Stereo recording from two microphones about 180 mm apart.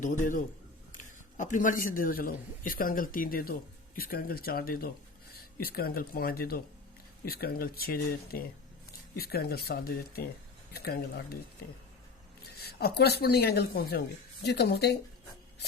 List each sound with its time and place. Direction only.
0.0 s a man's voice: 45° left (ahead or behind)
12.5 s speech: 60° left (ahead or behind)